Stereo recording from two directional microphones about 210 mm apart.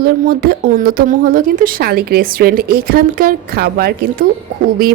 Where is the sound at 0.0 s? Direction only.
45° right (ahead or behind).